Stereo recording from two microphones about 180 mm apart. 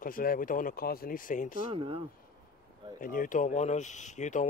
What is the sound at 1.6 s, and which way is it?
Speech, 30° right (ahead or behind).